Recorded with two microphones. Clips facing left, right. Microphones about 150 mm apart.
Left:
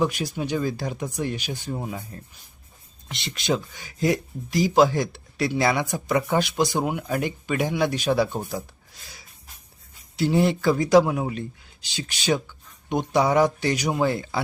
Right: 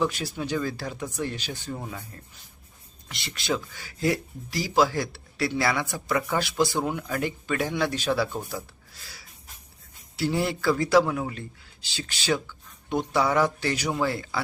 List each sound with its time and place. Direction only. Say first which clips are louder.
0.0 s speech: left 3 dB; 15° left (ahead or behind)
3.1 s speech: left 3 dB; 20° left (ahead or behind)